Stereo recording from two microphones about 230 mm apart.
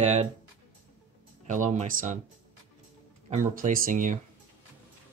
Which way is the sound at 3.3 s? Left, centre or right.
Right.